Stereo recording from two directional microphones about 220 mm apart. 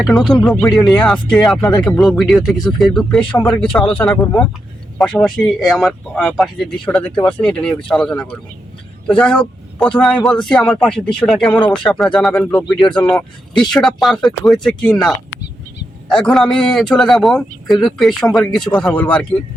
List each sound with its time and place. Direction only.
0.0 s speech: centre (ahead or behind)
11.6 s speech: 20° left (ahead or behind)
11.9 s speech: centre (ahead or behind)